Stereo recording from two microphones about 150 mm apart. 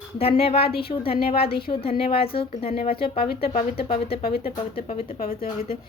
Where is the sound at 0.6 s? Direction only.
90° left.